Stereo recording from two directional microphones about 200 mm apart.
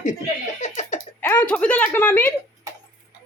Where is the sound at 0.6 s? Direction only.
35° left (ahead or behind).